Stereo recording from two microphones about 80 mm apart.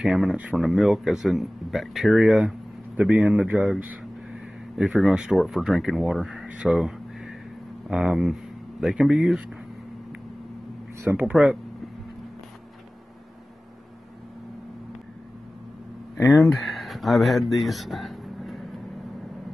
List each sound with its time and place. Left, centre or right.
0.0 s speech: centre
6.4 s a sound: centre
7.9 s speech: centre
11.1 s speech: centre
16.2 s speech: left
16.4 s speech: centre